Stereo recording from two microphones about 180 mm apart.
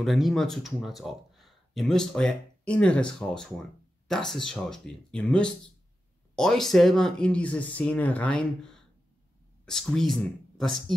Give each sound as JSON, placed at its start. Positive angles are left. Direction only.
{"t": 0.0, "sound": "speech", "side_deg": 0}